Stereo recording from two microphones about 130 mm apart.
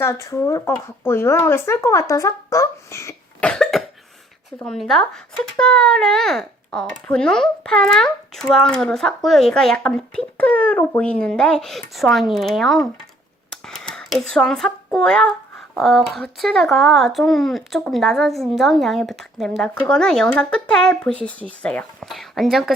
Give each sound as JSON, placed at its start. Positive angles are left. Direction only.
{"t": 0.0, "sound": "speech", "side_deg": 20}
{"t": 3.4, "sound": "cough", "side_deg": 5}
{"t": 4.6, "sound": "speech", "side_deg": 5}